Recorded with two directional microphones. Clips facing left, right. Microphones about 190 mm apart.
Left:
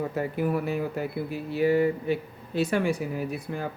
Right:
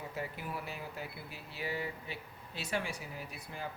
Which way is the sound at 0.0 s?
50° left (ahead or behind).